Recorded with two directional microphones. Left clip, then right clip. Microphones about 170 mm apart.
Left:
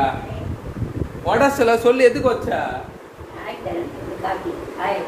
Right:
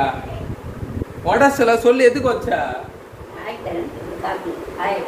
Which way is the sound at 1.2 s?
10° left (ahead or behind).